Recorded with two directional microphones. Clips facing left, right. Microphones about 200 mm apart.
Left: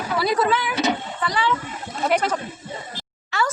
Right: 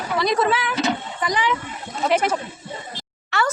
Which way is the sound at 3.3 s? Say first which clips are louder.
Right 1 dB; 70° right (ahead or behind).